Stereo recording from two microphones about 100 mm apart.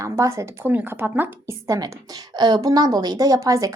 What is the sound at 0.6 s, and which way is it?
Speech, 20° right (ahead or behind).